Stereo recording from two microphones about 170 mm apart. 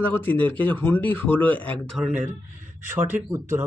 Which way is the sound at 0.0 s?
10° left (ahead or behind).